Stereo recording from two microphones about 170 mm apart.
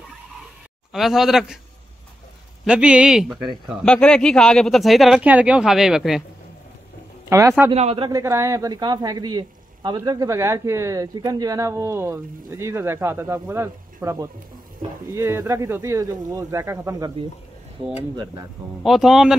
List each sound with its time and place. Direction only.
0.9 s speech: centre (ahead or behind)
2.6 s speech: 5° right (ahead or behind)
7.2 s speech: 15° right (ahead or behind)
7.7 s a man's voice: 40° right (ahead or behind)
8.1 s speech: 15° right (ahead or behind)
18.1 s speech: 25° right (ahead or behind)
18.8 s speech: centre (ahead or behind)